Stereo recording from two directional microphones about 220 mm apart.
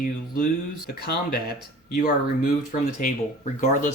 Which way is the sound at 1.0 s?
45° left (ahead or behind).